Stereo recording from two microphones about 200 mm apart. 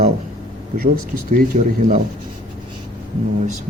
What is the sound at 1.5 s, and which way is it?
Speech, 40° right (ahead or behind).